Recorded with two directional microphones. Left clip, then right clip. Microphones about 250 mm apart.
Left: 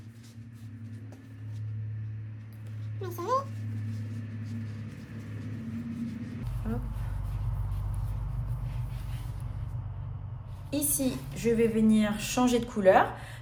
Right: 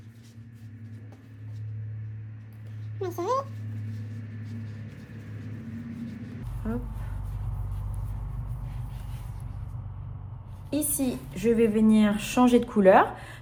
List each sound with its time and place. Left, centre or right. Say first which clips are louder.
3.0 s a child's voice: right 2 dB; centre
10.7 s a woman's voice: right 2 dB; right